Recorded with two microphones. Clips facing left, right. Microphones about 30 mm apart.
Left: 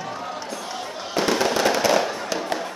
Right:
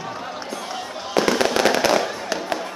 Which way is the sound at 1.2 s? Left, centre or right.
Centre.